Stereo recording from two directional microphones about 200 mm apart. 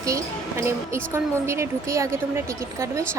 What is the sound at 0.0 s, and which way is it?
A woman's voice, 15° right (ahead or behind).